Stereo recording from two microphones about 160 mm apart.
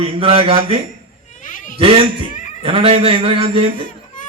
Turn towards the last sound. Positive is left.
turn(degrees=-35)  # may be behind; listen again after turning